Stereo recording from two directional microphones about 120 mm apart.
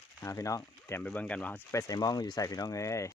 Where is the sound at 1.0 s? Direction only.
10° left (ahead or behind).